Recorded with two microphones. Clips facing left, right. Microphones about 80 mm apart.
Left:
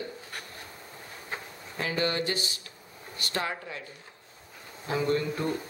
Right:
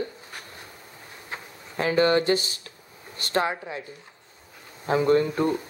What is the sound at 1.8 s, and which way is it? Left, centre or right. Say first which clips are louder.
Speech: right 8 dB; right.